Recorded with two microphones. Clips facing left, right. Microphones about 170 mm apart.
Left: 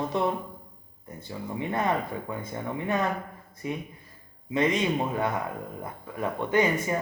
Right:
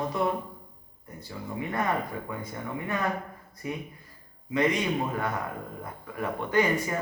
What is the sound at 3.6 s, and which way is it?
Speech, 20° left (ahead or behind).